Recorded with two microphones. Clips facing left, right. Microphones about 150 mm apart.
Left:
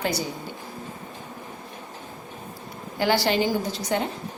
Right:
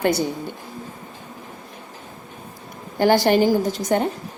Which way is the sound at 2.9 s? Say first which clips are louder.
Right 6 dB; 50° right (ahead or behind).